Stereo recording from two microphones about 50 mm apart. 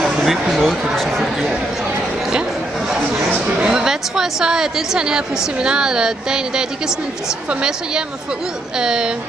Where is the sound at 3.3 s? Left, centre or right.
Right.